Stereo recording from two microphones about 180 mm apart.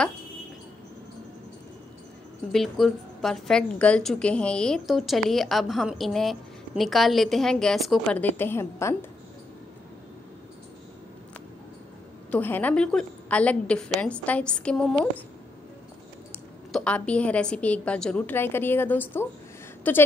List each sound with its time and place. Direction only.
2.5 s a woman's voice: centre (ahead or behind)
12.3 s a woman's voice: 10° left (ahead or behind)
16.7 s a woman's voice: 5° left (ahead or behind)